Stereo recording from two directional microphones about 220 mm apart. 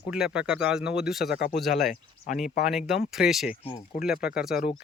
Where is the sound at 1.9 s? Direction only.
35° left (ahead or behind).